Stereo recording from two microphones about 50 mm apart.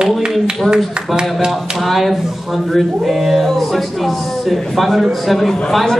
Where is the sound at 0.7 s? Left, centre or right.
Centre.